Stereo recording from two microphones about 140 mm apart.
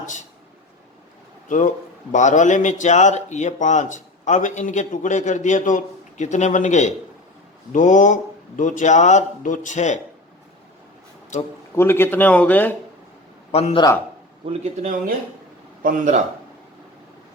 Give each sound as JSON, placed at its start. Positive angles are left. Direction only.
{"t": 0.0, "sound": "speech", "side_deg": 65}
{"t": 1.5, "sound": "a man's voice", "side_deg": 65}
{"t": 11.7, "sound": "a man's voice", "side_deg": 15}
{"t": 13.5, "sound": "a man's voice", "side_deg": 50}
{"t": 14.4, "sound": "speech", "side_deg": -55}
{"t": 15.8, "sound": "speech", "side_deg": -75}